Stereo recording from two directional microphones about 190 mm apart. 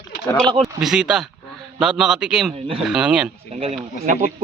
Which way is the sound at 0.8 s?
5° right (ahead or behind).